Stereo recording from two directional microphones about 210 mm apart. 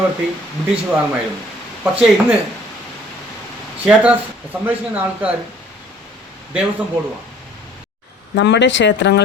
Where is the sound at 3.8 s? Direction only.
5° right (ahead or behind).